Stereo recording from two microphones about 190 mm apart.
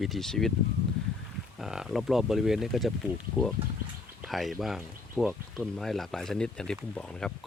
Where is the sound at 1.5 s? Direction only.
Centre (ahead or behind).